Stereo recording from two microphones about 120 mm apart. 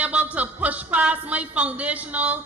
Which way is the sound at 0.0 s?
10° right (ahead or behind).